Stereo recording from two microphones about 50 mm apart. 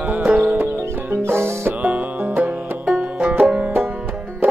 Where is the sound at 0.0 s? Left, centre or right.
Right.